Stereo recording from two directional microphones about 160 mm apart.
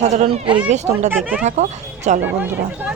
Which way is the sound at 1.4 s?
45° right (ahead or behind).